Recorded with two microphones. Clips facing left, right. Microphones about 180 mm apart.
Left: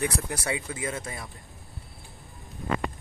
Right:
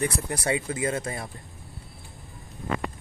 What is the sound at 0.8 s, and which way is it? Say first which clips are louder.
Speech: right 5 dB; 45° right (ahead or behind).